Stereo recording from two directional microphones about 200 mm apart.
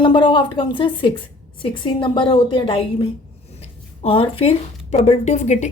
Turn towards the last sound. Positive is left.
turn(degrees=35)  # may be behind; listen again after turning